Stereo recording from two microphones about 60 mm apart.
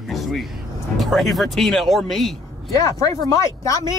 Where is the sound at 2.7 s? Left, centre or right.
Left.